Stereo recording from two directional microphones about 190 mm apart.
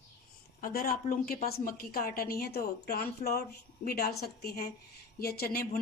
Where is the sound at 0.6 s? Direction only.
50° left (ahead or behind).